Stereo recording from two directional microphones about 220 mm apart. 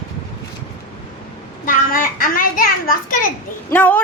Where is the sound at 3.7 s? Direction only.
5° left (ahead or behind).